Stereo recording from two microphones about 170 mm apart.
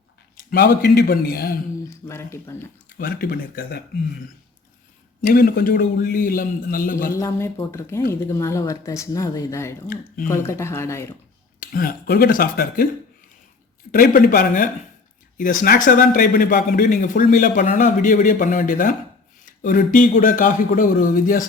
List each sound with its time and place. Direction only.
0.5 s a man's voice: 75° left (ahead or behind)
2.0 s speech: 15° left (ahead or behind)
3.0 s a man's voice: 60° left (ahead or behind)
5.2 s a man's voice: 55° left (ahead or behind)
7.2 s speech: 15° left (ahead or behind)
11.6 s a man's voice: 60° left (ahead or behind)
13.9 s a man's voice: 60° left (ahead or behind)